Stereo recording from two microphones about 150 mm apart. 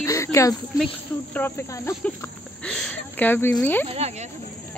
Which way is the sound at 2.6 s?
5° left (ahead or behind).